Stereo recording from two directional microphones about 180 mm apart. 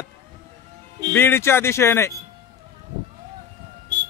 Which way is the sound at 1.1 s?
10° left (ahead or behind).